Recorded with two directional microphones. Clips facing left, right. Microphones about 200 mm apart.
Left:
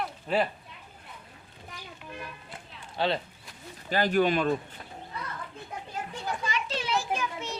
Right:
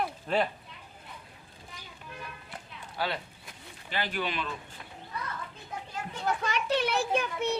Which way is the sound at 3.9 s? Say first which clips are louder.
Left 9 dB; 45° left (ahead or behind).